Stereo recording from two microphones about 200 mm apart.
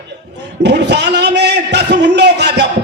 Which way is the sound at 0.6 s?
60° right (ahead or behind).